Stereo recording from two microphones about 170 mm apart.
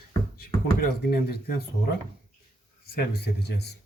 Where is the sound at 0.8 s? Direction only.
65° left (ahead or behind).